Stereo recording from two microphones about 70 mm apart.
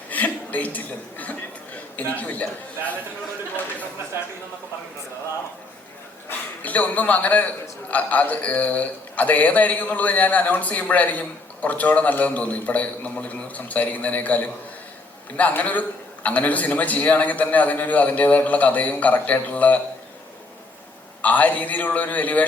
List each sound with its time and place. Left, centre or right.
0.1 s chuckle: left
6.2 s a man's voice: left
21.2 s a man's voice: left